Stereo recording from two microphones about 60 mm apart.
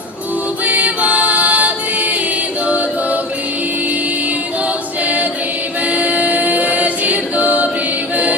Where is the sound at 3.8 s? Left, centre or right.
Right.